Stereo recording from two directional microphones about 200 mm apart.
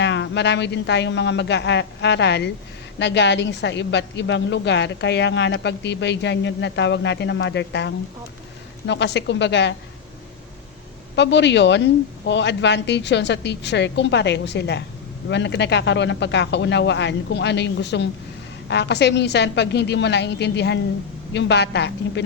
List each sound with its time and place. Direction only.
0.0 s a woman's voice: 60° left (ahead or behind)
11.1 s a woman's voice: 60° left (ahead or behind)